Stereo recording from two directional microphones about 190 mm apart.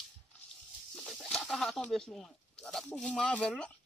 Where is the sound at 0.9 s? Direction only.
Centre (ahead or behind).